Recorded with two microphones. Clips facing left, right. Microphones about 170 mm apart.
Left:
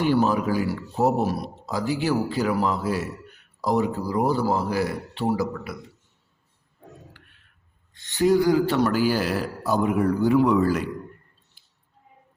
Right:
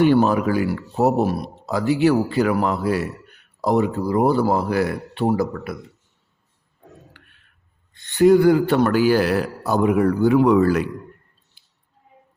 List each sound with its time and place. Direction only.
0.0 s speech: 65° right (ahead or behind)
7.9 s speech: 55° right (ahead or behind)